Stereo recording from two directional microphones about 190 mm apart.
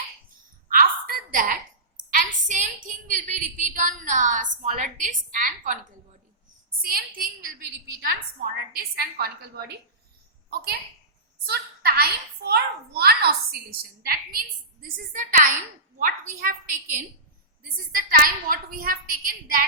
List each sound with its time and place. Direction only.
0.7 s a sound: 45° right (ahead or behind)
6.8 s a child's voice: 50° right (ahead or behind)
11.4 s a child's voice: 55° right (ahead or behind)